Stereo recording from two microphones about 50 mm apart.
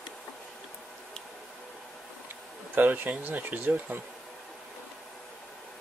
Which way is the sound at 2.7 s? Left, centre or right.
Right.